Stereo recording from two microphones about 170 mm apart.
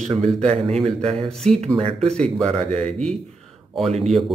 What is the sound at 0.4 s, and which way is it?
Speech, 40° right (ahead or behind).